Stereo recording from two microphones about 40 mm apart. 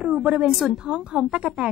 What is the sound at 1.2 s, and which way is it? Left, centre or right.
Speech, right.